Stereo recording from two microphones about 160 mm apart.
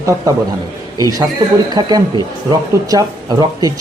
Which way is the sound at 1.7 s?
25° right (ahead or behind).